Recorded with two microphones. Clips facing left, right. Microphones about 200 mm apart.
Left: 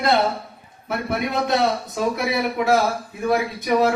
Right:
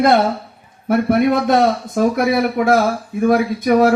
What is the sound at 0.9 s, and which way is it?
A man's voice, 50° right (ahead or behind).